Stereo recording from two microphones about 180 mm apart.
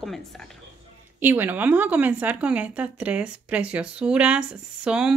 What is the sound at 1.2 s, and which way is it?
A woman's voice, 10° right (ahead or behind).